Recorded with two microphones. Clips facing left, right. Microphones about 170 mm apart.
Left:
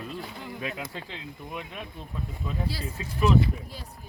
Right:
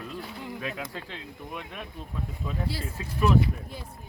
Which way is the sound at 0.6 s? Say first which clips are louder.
Left 2 dB; 5° left (ahead or behind).